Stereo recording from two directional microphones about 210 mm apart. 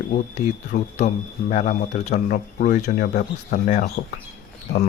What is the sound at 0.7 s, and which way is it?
Speech, 35° left (ahead or behind).